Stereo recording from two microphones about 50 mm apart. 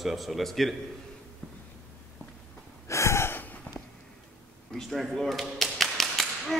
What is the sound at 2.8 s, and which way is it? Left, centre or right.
Gasp, left.